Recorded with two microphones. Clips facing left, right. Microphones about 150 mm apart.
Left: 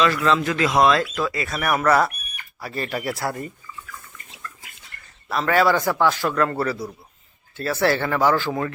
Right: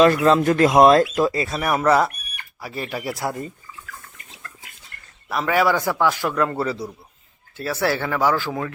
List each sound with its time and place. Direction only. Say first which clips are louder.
0.3 s speech: right 5 dB; 50° right (ahead or behind)
1.2 s speech: right 4 dB; 30° right (ahead or behind)
2.6 s a man's voice: left 1 dB; 10° right (ahead or behind)
5.3 s a man's voice: left 1 dB; 10° right (ahead or behind)
7.5 s a man's voice: left 2 dB; 10° right (ahead or behind)